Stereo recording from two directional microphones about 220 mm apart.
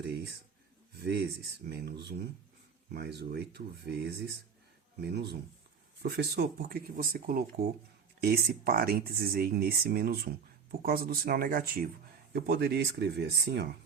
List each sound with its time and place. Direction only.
1.0 s speech: 50° right (ahead or behind)